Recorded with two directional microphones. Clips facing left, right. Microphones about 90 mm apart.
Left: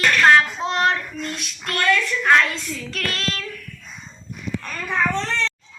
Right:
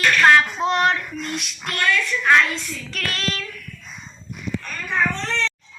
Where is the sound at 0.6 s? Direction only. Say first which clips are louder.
Right 1 dB; 30° left (ahead or behind).